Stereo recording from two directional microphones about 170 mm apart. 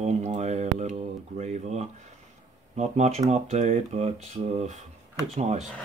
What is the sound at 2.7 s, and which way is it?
Speech, 40° right (ahead or behind).